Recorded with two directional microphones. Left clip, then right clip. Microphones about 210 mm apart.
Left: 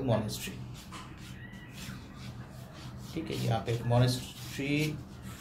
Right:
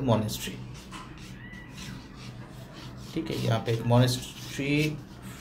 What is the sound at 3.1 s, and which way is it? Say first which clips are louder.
Speech: right 4 dB; 20° right (ahead or behind).